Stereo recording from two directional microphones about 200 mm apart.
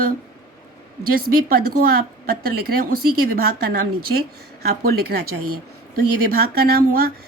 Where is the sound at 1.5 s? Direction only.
45° right (ahead or behind).